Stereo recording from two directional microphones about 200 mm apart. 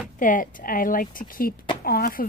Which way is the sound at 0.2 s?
40° left (ahead or behind).